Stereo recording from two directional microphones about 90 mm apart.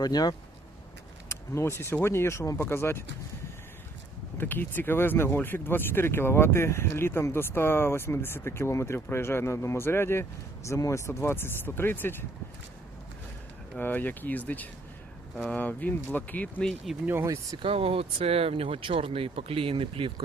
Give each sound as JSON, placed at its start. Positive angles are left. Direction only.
{"t": 0.0, "sound": "speech", "side_deg": 50}
{"t": 1.3, "sound": "speech", "side_deg": 30}
{"t": 4.4, "sound": "speech", "side_deg": 20}
{"t": 13.7, "sound": "speech", "side_deg": 20}
{"t": 17.2, "sound": "speech", "side_deg": -40}
{"t": 17.6, "sound": "speech", "side_deg": -90}